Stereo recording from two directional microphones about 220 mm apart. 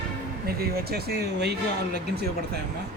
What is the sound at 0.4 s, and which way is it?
Speech, 45° right (ahead or behind).